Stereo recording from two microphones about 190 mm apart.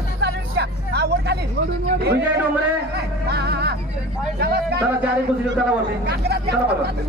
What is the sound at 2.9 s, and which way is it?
Music, 60° right (ahead or behind).